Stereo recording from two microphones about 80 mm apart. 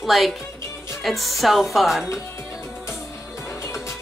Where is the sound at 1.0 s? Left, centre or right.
Centre.